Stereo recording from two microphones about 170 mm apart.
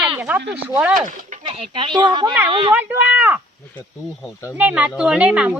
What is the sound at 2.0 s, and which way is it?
Speech, 25° right (ahead or behind).